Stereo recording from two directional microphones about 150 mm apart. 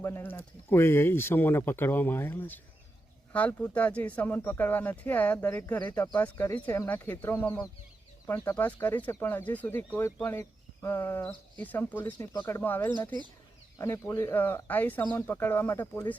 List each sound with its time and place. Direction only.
0.0 s speech: 15° left (ahead or behind)
12.3 s speech: 25° left (ahead or behind)